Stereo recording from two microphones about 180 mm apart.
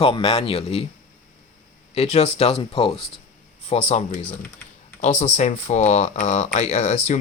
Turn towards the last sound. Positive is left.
turn(degrees=40)  # may be behind; listen again after turning